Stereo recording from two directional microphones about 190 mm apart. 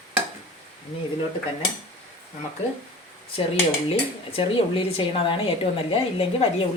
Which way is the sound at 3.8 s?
30° left (ahead or behind).